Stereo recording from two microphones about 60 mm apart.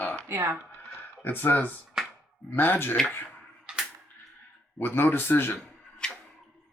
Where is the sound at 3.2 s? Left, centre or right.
Centre.